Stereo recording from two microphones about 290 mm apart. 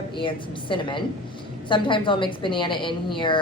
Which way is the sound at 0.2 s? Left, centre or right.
Centre.